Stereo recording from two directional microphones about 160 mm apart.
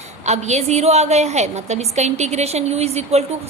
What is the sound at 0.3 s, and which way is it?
A woman's voice, 45° right (ahead or behind).